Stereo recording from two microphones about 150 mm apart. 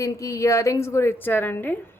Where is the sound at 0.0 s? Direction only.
20° left (ahead or behind).